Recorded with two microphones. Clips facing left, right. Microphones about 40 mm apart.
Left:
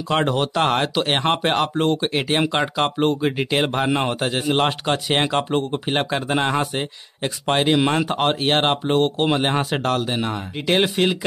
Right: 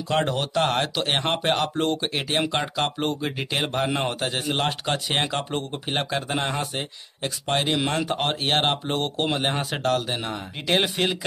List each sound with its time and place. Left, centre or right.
0.1 s speech: centre